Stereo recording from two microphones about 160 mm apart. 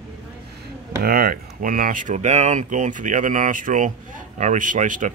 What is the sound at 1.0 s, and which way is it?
Speech, 70° right (ahead or behind).